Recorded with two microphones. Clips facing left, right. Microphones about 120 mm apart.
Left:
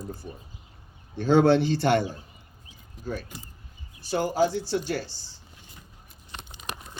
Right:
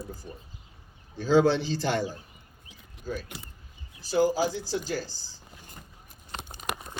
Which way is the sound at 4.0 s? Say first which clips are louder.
Even; 65° left (ahead or behind).